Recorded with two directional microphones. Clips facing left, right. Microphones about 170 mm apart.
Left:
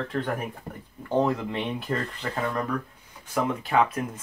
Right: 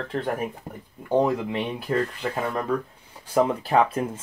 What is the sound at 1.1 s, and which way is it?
Speech, 10° right (ahead or behind).